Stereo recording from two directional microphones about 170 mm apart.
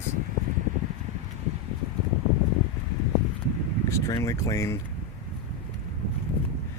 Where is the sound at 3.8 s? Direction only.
15° left (ahead or behind).